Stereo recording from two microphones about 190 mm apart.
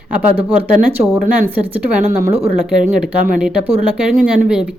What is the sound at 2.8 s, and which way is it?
Speech, 45° right (ahead or behind).